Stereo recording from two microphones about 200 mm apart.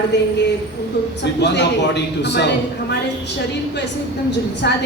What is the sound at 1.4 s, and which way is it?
A woman's voice, 60° left (ahead or behind).